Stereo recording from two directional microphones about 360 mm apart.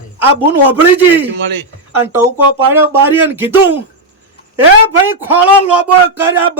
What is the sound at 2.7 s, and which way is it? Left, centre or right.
Speech, centre.